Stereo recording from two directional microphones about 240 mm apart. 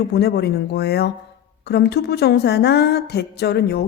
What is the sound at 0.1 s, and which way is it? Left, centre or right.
Speech, left.